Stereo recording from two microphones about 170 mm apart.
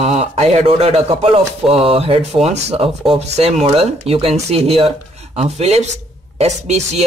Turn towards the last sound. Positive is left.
turn(degrees=-40)  # may be behind; listen again after turning